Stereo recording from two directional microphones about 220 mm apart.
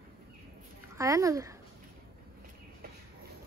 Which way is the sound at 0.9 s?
15° right (ahead or behind).